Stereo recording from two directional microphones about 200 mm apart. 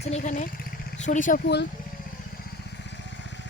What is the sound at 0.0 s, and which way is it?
Speech, 35° left (ahead or behind).